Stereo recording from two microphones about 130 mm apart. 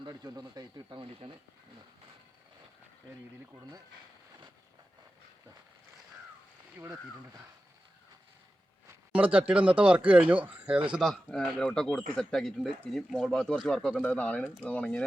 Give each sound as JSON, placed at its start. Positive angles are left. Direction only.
{"t": 0.0, "sound": "speech", "side_deg": -30}
{"t": 1.0, "sound": "speech", "side_deg": -40}
{"t": 8.9, "sound": "speech", "side_deg": -10}
{"t": 11.0, "sound": "speech", "side_deg": 5}